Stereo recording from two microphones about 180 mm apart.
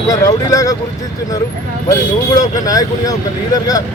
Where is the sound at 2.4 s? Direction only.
20° left (ahead or behind).